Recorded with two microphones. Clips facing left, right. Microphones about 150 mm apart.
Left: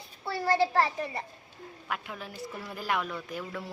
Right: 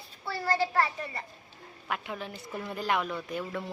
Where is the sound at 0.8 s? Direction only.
20° left (ahead or behind).